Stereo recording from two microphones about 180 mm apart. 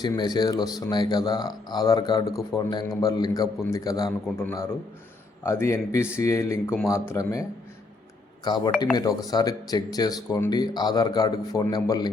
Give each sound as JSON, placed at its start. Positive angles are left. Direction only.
{"t": 0.0, "sound": "speech", "side_deg": 25}
{"t": 8.4, "sound": "speech", "side_deg": 25}